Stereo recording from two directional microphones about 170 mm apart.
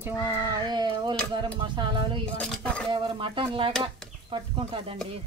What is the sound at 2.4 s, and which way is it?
Speech, 5° left (ahead or behind).